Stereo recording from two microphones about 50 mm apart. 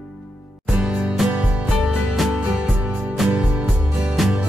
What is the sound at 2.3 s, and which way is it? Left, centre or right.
Music, centre.